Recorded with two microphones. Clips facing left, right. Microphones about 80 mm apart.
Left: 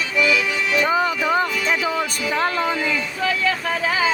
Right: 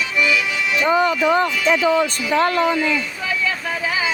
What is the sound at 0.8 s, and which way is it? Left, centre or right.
Music, centre.